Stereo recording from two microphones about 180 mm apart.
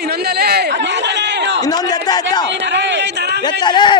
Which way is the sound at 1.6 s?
20° left (ahead or behind).